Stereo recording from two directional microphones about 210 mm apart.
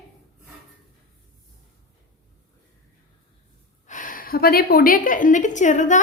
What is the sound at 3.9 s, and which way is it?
A woman's voice, 40° left (ahead or behind).